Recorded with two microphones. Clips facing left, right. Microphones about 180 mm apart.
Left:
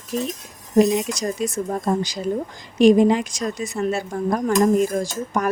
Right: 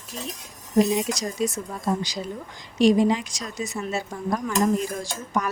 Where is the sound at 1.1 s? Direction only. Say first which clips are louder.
Left 2 dB; 50° left (ahead or behind).